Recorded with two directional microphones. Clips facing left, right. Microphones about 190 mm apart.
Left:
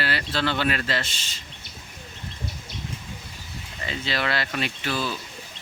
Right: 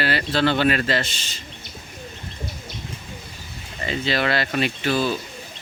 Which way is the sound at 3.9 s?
55° right (ahead or behind).